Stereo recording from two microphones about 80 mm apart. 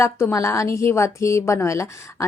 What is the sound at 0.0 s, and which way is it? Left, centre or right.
Speech, left.